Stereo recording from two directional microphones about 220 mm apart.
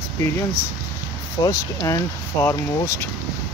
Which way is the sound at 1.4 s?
15° left (ahead or behind).